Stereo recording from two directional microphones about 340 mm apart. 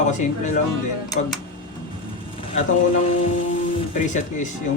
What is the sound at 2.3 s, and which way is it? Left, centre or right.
Speech, centre.